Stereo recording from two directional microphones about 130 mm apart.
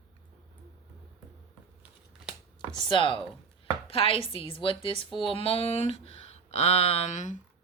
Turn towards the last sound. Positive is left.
turn(degrees=70)  # may be behind; listen again after turning